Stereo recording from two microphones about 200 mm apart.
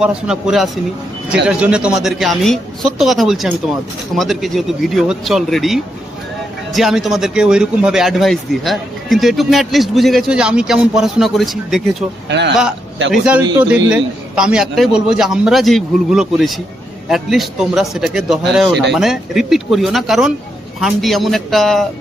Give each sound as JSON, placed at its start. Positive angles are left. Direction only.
{"t": 0.0, "sound": "speech", "side_deg": -5}
{"t": 12.3, "sound": "speech", "side_deg": -60}
{"t": 13.1, "sound": "speech", "side_deg": -5}